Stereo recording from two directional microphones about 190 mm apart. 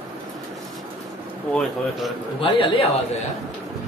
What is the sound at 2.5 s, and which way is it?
Speech, 25° left (ahead or behind).